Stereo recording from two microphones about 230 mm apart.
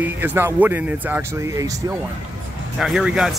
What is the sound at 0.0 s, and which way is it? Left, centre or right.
Speech, centre.